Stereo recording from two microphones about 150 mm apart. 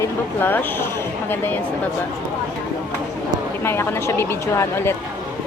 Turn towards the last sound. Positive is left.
turn(degrees=15)  # may be behind; listen again after turning